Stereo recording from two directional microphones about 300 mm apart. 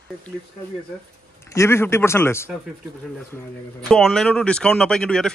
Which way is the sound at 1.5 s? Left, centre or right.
Centre.